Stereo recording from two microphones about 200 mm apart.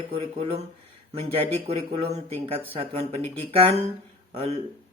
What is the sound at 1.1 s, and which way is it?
Speech, 30° right (ahead or behind).